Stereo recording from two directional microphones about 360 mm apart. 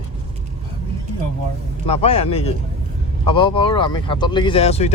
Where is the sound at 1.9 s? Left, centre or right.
Centre.